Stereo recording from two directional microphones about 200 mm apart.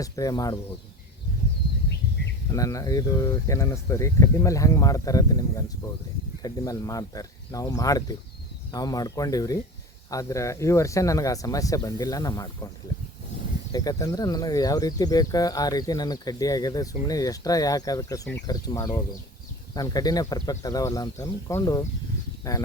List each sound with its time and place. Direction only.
0.0 s speech: 15° left (ahead or behind)
2.5 s speech: 15° left (ahead or behind)
13.7 s speech: 20° left (ahead or behind)